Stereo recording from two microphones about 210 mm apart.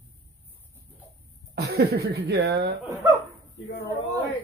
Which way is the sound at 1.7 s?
50° right (ahead or behind).